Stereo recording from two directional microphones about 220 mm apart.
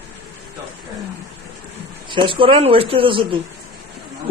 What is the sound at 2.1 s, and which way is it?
Speech, 25° right (ahead or behind).